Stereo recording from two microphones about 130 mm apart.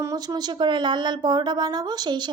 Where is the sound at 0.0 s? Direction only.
25° right (ahead or behind).